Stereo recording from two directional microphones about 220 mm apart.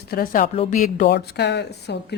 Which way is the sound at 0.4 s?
25° left (ahead or behind).